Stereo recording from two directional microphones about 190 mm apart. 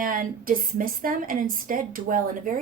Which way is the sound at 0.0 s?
45° right (ahead or behind).